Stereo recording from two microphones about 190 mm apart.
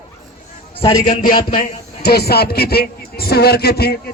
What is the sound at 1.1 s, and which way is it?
A man's voice, 45° left (ahead or behind).